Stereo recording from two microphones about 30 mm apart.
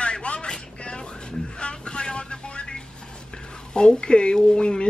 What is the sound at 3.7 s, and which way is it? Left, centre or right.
Speech, left.